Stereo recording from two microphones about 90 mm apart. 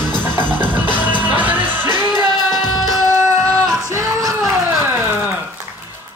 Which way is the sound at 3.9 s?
35° right (ahead or behind).